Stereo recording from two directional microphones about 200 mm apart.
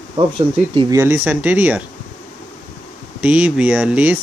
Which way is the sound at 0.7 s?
15° right (ahead or behind).